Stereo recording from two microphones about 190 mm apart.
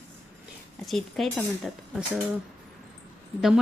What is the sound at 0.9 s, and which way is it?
Speech, centre (ahead or behind).